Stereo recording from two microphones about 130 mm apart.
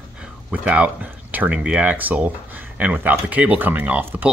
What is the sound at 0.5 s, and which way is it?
Speech, 10° right (ahead or behind).